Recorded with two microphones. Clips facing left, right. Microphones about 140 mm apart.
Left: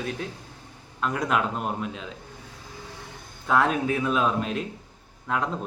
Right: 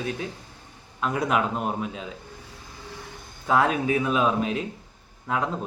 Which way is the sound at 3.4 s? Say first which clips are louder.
Right 1 dB; 5° right (ahead or behind).